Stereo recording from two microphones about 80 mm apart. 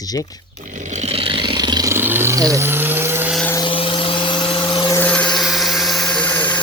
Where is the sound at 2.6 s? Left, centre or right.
Right.